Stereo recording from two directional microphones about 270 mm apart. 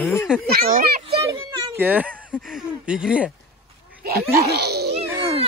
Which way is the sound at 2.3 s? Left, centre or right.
Centre.